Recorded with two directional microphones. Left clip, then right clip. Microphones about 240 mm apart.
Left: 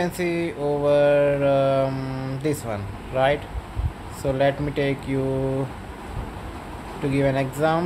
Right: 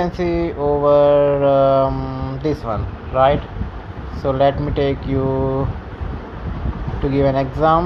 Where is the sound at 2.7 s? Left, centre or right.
Centre.